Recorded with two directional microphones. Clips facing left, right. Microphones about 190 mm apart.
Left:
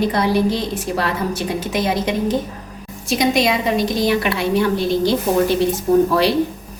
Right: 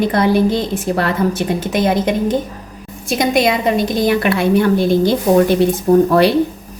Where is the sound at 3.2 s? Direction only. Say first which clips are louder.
Right 3 dB; 55° right (ahead or behind).